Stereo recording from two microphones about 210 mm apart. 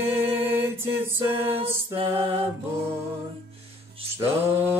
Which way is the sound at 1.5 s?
25° right (ahead or behind).